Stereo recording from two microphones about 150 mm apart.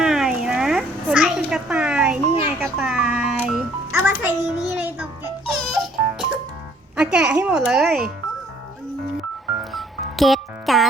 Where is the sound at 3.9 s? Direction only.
15° right (ahead or behind).